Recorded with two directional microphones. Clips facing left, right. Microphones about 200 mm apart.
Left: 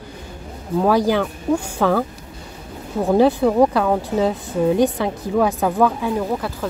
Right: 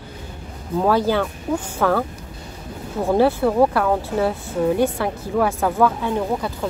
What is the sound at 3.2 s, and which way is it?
A woman's voice, 15° left (ahead or behind).